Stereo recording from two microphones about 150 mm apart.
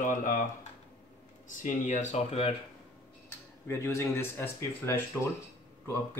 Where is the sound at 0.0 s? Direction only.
60° left (ahead or behind).